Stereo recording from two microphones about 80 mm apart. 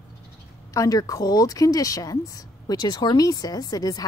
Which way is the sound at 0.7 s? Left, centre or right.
Left.